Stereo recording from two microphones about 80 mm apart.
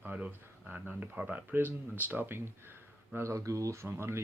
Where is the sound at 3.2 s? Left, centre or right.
Right.